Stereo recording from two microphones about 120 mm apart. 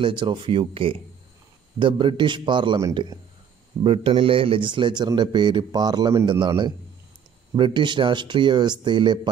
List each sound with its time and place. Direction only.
0.0 s a man's voice: 40° right (ahead or behind)